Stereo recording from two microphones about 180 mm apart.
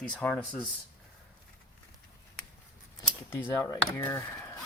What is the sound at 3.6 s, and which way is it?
Speech, 15° left (ahead or behind).